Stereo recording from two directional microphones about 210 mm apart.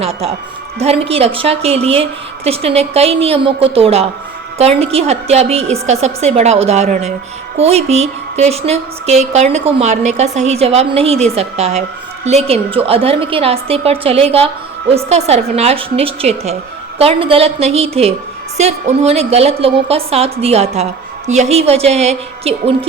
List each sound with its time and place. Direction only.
0.0 s a woman's voice: 30° right (ahead or behind)